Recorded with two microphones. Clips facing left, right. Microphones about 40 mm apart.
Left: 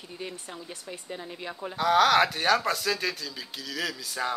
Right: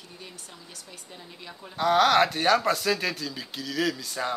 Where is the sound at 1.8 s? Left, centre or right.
Centre.